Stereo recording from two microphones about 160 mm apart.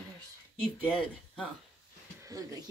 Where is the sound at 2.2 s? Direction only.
20° right (ahead or behind).